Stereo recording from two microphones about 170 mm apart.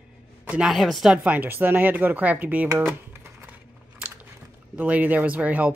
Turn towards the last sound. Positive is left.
turn(degrees=-10)  # may be behind; listen again after turning